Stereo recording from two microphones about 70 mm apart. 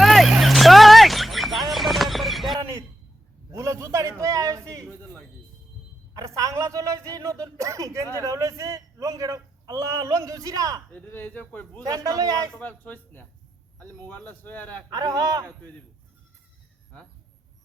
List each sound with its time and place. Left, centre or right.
0.0 s vehicle: centre
3.5 s a sound: right
6.1 s a sound: right
10.9 s speech: left
11.9 s a man's voice: right
12.5 s a man's voice: left
14.9 s a man's voice: right